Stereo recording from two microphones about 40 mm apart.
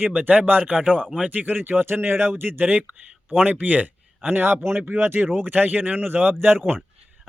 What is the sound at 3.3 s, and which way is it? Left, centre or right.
Speech, right.